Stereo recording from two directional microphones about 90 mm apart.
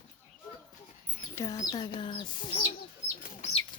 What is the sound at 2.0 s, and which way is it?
Speech, 65° left (ahead or behind).